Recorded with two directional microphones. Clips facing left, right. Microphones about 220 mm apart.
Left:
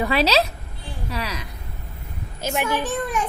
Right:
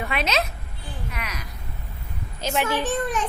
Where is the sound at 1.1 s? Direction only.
30° left (ahead or behind).